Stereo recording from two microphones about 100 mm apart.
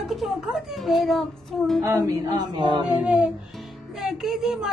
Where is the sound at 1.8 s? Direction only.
35° right (ahead or behind).